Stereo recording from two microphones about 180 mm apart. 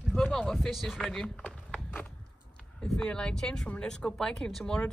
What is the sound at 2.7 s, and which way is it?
Speech, 5° left (ahead or behind).